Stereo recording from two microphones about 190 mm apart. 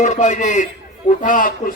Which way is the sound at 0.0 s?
40° left (ahead or behind).